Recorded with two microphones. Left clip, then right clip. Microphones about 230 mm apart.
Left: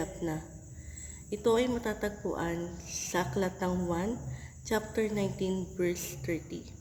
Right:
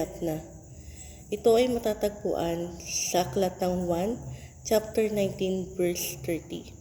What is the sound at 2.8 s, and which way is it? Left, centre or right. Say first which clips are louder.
Speech: right 8 dB; left.